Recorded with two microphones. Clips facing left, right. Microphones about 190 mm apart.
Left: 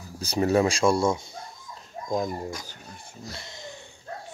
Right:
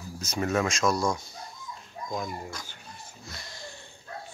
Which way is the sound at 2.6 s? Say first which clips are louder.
Left 2 dB; 40° left (ahead or behind).